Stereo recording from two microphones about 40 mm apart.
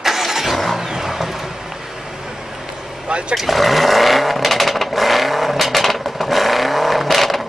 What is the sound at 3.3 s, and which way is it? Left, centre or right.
Vehicle, centre.